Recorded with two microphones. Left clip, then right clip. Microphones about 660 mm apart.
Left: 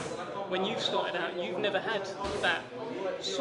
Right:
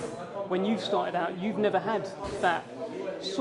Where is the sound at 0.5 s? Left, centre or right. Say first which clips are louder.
Right 2 dB; right.